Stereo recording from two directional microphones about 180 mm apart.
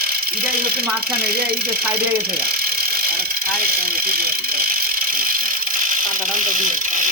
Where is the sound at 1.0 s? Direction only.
55° right (ahead or behind).